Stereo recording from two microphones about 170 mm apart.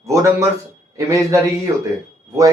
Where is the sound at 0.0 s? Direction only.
20° right (ahead or behind).